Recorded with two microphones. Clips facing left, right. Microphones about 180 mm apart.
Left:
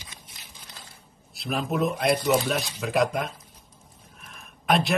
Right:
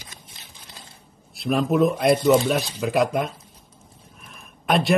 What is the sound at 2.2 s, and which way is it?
Speech, 25° right (ahead or behind).